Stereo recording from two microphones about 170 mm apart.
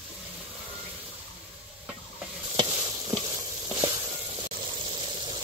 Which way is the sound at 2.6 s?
20° right (ahead or behind).